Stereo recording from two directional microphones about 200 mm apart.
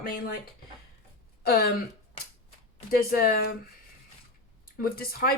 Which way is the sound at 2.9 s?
45° left (ahead or behind).